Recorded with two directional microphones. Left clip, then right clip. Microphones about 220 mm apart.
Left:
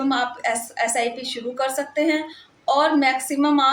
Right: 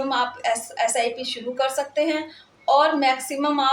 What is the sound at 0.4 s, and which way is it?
A woman's voice, 15° left (ahead or behind).